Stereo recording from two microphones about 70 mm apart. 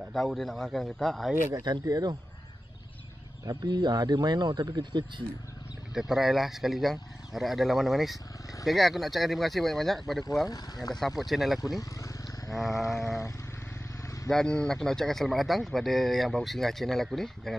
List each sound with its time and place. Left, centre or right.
0.1 s a man's voice: centre
1.5 s speech: right
1.9 s speech: right
3.4 s speech: right
5.9 s a man's voice: centre
10.5 s speech: left
11.0 s a man's voice: centre
14.0 s vehicle: left
14.3 s a man's voice: centre